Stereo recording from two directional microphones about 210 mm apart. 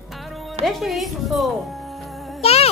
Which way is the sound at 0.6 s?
Centre (ahead or behind).